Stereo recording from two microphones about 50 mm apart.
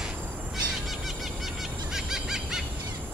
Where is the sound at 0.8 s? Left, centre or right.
Centre.